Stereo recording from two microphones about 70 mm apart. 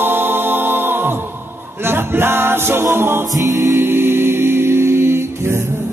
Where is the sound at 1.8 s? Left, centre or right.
Right.